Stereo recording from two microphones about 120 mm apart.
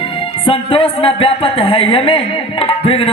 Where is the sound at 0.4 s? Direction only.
50° left (ahead or behind).